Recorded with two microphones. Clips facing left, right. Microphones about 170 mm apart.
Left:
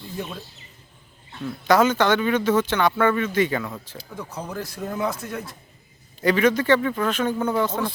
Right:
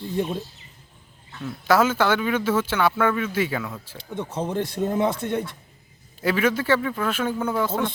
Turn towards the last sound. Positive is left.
turn(degrees=-5)  # may be behind; listen again after turning